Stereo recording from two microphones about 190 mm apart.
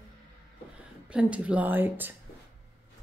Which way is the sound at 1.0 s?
5° right (ahead or behind).